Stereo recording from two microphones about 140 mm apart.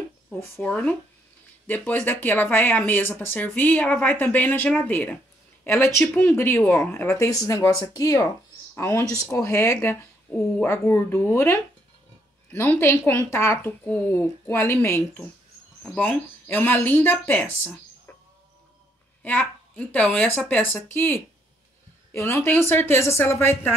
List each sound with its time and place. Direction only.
0.6 s speech: 5° left (ahead or behind)
15.8 s speech: 5° left (ahead or behind)
19.2 s speech: 10° left (ahead or behind)